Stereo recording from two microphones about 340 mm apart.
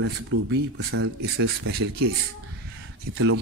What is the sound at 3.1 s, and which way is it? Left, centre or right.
Speech, right.